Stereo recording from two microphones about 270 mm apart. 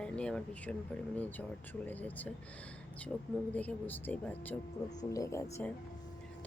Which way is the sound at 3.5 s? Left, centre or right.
Centre.